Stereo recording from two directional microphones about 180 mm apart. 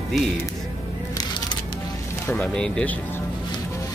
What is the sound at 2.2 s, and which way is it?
Speech, 5° left (ahead or behind).